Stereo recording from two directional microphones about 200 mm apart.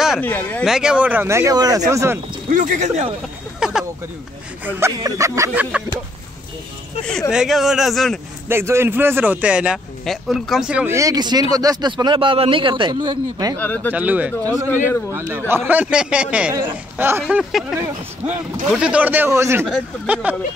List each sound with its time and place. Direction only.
0.2 s speech: 10° left (ahead or behind)
0.7 s a man's voice: 5° right (ahead or behind)
2.5 s speech: 40° right (ahead or behind)
3.5 s a sound: 5° right (ahead or behind)
4.6 s a man's voice: 15° right (ahead or behind)
7.1 s speech: centre (ahead or behind)
8.5 s a man's voice: 10° right (ahead or behind)
13.6 s speech: 10° left (ahead or behind)
13.9 s a man's voice: 5° right (ahead or behind)
17.3 s speech: centre (ahead or behind)
17.7 s a man's voice: 15° right (ahead or behind)